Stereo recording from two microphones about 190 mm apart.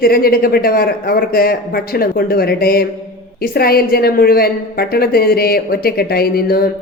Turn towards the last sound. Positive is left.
turn(degrees=55)  # may be behind; listen again after turning